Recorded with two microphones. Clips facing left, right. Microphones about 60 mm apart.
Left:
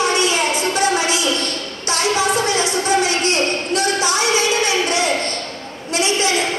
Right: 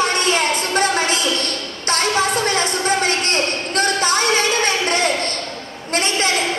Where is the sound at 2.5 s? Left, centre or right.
Right.